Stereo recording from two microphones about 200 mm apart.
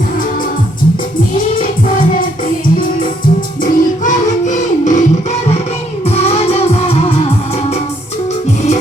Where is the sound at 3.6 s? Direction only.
40° left (ahead or behind).